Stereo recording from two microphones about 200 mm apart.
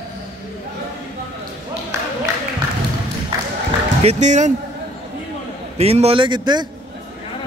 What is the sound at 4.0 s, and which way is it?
Speech, 35° right (ahead or behind).